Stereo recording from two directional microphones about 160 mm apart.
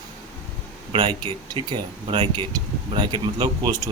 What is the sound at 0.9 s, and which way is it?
Speech, 25° right (ahead or behind).